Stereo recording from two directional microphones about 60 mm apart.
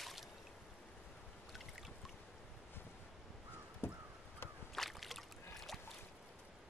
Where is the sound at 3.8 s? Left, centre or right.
Left.